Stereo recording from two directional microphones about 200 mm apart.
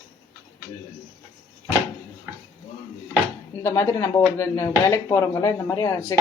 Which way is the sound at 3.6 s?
15° left (ahead or behind).